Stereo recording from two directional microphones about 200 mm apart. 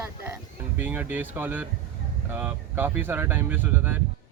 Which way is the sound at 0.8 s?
10° right (ahead or behind).